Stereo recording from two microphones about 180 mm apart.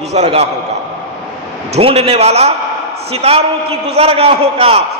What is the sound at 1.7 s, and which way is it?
A man's voice, 30° right (ahead or behind).